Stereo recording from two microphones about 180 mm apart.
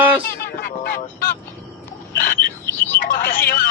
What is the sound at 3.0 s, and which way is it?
Speech, 50° left (ahead or behind).